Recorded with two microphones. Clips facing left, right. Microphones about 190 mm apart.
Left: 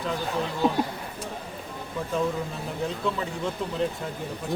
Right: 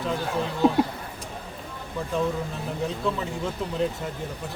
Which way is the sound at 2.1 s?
Centre (ahead or behind).